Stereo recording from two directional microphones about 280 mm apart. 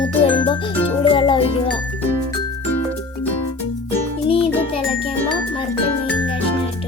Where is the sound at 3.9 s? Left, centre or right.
Centre.